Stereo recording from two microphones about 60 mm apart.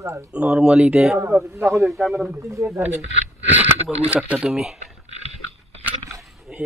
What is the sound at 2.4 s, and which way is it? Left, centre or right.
Speech, right.